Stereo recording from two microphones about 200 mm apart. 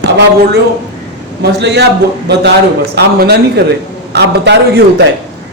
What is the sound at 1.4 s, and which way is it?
A man's voice, 60° right (ahead or behind).